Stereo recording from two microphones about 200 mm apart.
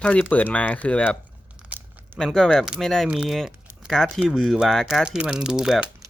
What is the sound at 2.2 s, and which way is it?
Speech, centre (ahead or behind).